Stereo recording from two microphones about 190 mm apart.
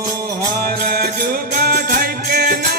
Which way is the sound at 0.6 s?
50° right (ahead or behind).